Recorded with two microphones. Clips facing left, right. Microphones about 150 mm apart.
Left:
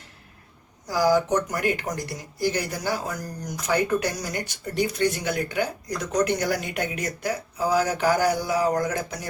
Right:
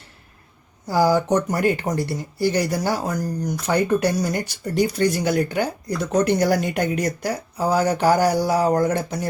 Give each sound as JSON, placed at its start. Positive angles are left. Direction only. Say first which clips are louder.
{"t": 0.9, "sound": "speech", "louder": "right 3 dB", "side_deg": -30}